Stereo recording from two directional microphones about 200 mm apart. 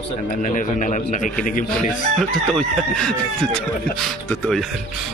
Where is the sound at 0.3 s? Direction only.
40° left (ahead or behind).